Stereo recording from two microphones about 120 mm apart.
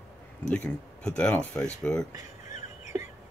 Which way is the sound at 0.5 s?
10° left (ahead or behind).